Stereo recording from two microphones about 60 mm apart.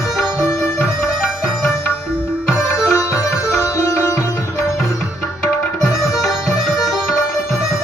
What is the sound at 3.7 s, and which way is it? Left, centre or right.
Music, left.